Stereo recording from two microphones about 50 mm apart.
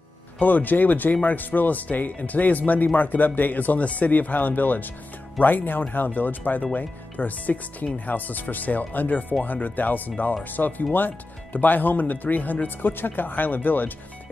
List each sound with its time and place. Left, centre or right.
0.4 s speech: left